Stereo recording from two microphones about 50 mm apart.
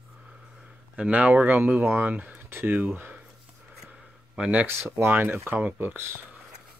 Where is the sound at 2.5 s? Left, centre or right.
Right.